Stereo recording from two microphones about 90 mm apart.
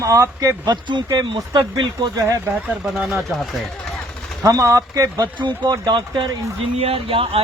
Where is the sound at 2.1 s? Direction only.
35° right (ahead or behind).